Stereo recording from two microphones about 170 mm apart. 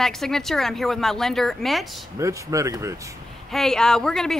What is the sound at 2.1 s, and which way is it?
Speech, 20° right (ahead or behind).